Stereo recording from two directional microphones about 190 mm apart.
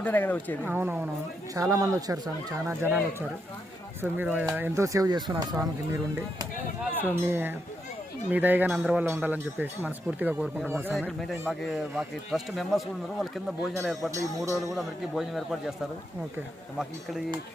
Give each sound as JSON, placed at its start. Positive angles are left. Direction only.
{"t": 0.0, "sound": "speech", "side_deg": 10}
{"t": 0.6, "sound": "speech", "side_deg": -10}
{"t": 6.9, "sound": "speech", "side_deg": -10}
{"t": 10.9, "sound": "speech", "side_deg": 0}
{"t": 14.1, "sound": "speech", "side_deg": -15}
{"t": 14.8, "sound": "speech", "side_deg": 0}